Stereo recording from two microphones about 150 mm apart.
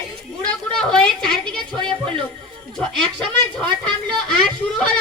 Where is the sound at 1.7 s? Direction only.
30° right (ahead or behind).